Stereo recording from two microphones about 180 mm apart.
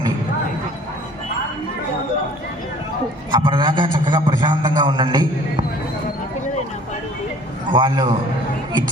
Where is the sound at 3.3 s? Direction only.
25° right (ahead or behind).